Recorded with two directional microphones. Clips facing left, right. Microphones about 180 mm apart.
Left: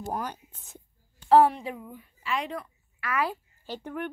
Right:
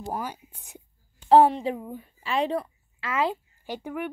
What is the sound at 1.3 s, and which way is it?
A woman's voice, 25° right (ahead or behind).